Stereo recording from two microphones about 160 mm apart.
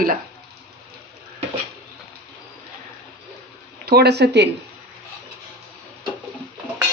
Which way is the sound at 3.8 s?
85° right.